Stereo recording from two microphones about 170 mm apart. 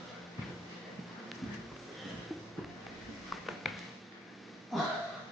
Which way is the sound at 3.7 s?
Centre (ahead or behind).